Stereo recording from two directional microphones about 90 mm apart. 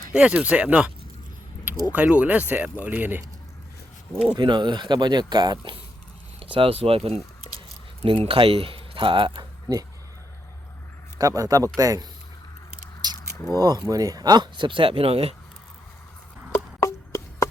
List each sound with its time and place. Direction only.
0.1 s speech: 10° right (ahead or behind)
1.9 s speech: 15° right (ahead or behind)
4.4 s speech: 55° right (ahead or behind)
6.4 s speech: 90° right; by 9.8 s 50° right (ahead or behind)
11.2 s a man's voice: 40° right (ahead or behind)
13.3 s speech: 30° left (ahead or behind)
13.6 s speech: 50° right (ahead or behind); by 15.2 s 90° right
16.8 s a sound: 35° left (ahead or behind)